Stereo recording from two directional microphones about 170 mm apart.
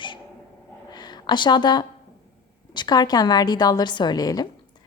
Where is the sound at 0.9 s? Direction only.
25° left (ahead or behind).